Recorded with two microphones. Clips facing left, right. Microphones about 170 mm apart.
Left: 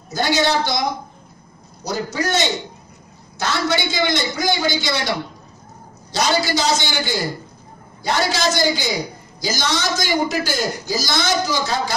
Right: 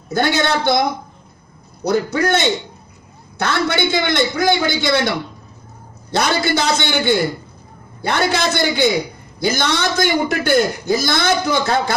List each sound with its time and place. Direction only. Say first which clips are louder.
0.1 s a man's voice: right 1 dB; 60° right (ahead or behind)
6.1 s a man's voice: right 2 dB; 60° right (ahead or behind)